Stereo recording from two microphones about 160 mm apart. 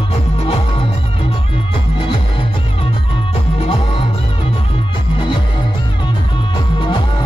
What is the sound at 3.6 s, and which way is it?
Music, 35° left (ahead or behind).